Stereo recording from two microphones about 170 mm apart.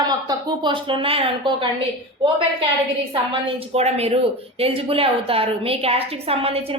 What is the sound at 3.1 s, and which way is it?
A woman's voice, 30° right (ahead or behind).